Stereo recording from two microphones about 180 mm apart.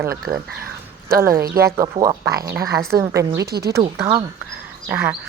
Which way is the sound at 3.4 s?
60° right (ahead or behind).